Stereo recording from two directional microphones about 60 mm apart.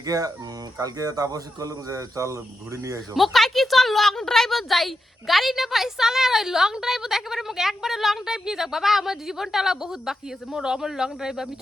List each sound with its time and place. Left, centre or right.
0.0 s speech: right
3.2 s a woman's voice: centre